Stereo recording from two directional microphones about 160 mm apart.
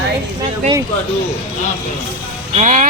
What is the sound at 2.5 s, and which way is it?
Speech, 50° right (ahead or behind).